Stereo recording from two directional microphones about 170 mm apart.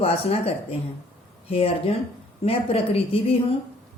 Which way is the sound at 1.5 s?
35° left (ahead or behind).